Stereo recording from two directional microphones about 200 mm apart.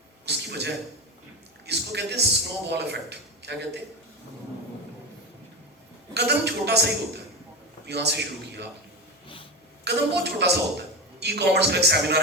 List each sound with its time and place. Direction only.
0.3 s a sound: 55° right (ahead or behind)
1.6 s a man's voice: 55° right (ahead or behind)
6.1 s a man's voice: 55° right (ahead or behind)
9.8 s a man's voice: 60° right (ahead or behind)